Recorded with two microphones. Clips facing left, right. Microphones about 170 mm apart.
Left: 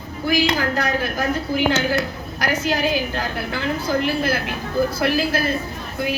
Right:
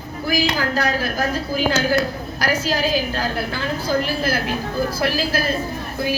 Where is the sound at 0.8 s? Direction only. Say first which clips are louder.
Right 1 dB; 35° right (ahead or behind).